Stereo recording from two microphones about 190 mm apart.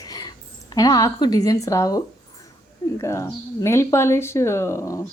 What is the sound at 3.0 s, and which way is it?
Speech, 15° left (ahead or behind).